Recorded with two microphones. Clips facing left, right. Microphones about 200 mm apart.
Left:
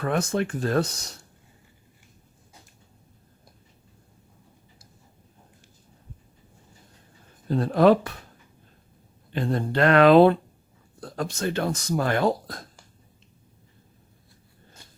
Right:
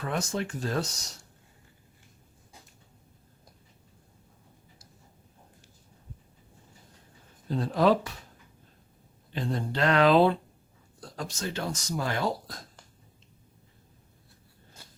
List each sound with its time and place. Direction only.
0.0 s speech: 55° left (ahead or behind)
7.4 s speech: 60° left (ahead or behind)
9.3 s speech: 55° left (ahead or behind)